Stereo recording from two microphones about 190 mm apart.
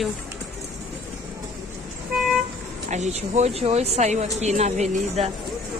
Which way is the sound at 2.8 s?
40° right (ahead or behind).